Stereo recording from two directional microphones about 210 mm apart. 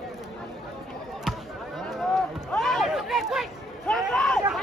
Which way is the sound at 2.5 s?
Centre (ahead or behind).